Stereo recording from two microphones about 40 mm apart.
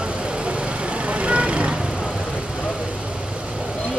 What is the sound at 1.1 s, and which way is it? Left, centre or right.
Vehicle, right.